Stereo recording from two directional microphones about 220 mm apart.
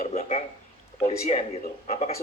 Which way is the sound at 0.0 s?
30° left (ahead or behind).